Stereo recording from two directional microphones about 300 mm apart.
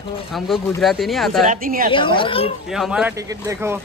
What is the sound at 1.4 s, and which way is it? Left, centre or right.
Speech, right.